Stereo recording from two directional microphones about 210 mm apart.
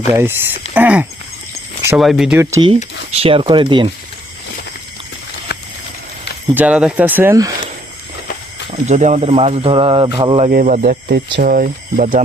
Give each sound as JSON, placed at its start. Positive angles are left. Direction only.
{"t": 0.0, "sound": "speech", "side_deg": -10}
{"t": 2.4, "sound": "speech", "side_deg": -15}
{"t": 3.1, "sound": "speech", "side_deg": -30}
{"t": 6.5, "sound": "speech", "side_deg": -5}
{"t": 8.9, "sound": "speech", "side_deg": -35}
{"t": 10.5, "sound": "speech", "side_deg": -40}